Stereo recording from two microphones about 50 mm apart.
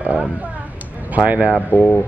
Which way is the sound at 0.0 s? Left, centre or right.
Right.